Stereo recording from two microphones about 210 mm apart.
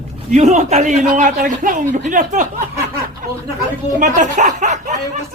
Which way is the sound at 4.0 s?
35° right (ahead or behind).